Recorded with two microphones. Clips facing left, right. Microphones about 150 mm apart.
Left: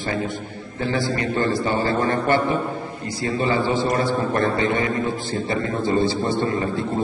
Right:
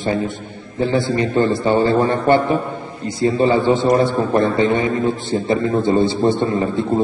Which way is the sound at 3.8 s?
55° right (ahead or behind).